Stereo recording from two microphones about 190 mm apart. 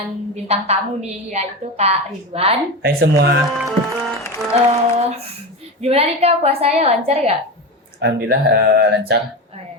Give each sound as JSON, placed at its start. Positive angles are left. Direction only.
{"t": 0.4, "sound": "a woman's voice", "side_deg": -35}
{"t": 2.8, "sound": "speech", "side_deg": -60}
{"t": 3.5, "sound": "speech", "side_deg": 0}
{"t": 4.5, "sound": "a woman's voice", "side_deg": -35}
{"t": 8.0, "sound": "speech", "side_deg": -60}